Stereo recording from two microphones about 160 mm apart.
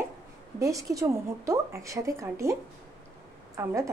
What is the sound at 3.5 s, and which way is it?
Speech, 20° right (ahead or behind).